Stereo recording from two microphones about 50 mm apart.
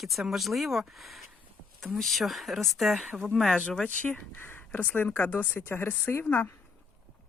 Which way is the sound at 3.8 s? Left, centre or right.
Left.